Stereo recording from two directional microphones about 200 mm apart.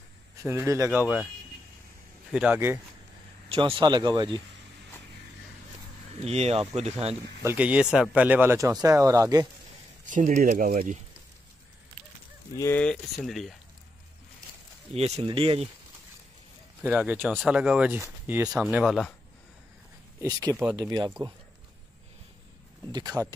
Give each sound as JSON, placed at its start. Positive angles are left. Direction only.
{"t": 0.4, "sound": "speech", "side_deg": -15}
{"t": 2.3, "sound": "speech", "side_deg": -10}
{"t": 3.4, "sound": "speech", "side_deg": -30}
{"t": 6.2, "sound": "speech", "side_deg": -30}
{"t": 7.4, "sound": "speech", "side_deg": -5}
{"t": 10.0, "sound": "speech", "side_deg": -40}
{"t": 12.5, "sound": "speech", "side_deg": 10}
{"t": 15.0, "sound": "speech", "side_deg": -30}
{"t": 16.8, "sound": "speech", "side_deg": -10}
{"t": 20.2, "sound": "speech", "side_deg": -15}
{"t": 22.8, "sound": "speech", "side_deg": -20}